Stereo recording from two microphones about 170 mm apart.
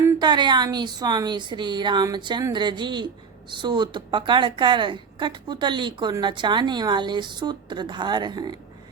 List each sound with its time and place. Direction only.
0.2 s a woman's voice: 25° right (ahead or behind)